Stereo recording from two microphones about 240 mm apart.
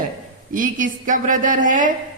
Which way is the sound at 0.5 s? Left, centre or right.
Right.